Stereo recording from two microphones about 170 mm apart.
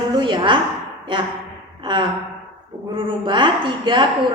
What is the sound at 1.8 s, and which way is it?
Gasp, 25° right (ahead or behind).